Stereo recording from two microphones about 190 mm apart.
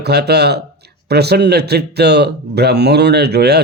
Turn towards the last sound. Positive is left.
turn(degrees=-60)  # may be behind; listen again after turning